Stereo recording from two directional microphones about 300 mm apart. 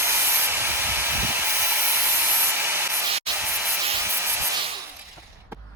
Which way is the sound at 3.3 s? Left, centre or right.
Centre.